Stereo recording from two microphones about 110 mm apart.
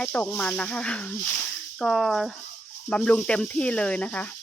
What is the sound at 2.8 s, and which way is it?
Speech, 10° left (ahead or behind).